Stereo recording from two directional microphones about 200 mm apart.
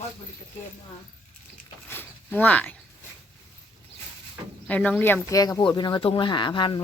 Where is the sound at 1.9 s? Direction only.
10° left (ahead or behind).